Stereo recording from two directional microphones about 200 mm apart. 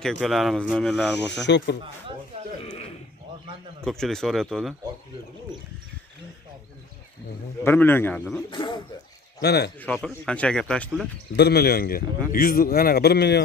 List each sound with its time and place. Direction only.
0.2 s speech: centre (ahead or behind)
1.4 s speech: 60° left (ahead or behind)
2.6 s a sound: 30° left (ahead or behind)
3.8 s speech: 5° left (ahead or behind)
7.6 s speech: 10° left (ahead or behind)
8.5 s speech: 25° left (ahead or behind)
9.4 s speech: 55° left (ahead or behind)
9.8 s speech: 5° left (ahead or behind)
11.3 s a man's voice: 55° left (ahead or behind)